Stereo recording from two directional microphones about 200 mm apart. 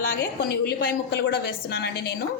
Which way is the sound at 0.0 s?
50° left (ahead or behind).